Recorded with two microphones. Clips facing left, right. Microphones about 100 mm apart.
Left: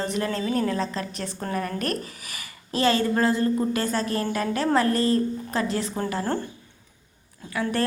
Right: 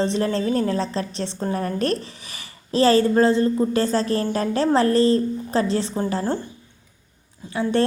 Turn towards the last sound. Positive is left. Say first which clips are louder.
# right 5 dB
turn(degrees=-25)  # may be behind; listen again after turning